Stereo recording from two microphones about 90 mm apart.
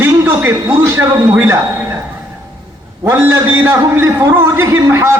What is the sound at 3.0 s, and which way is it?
A man's voice, 25° right (ahead or behind).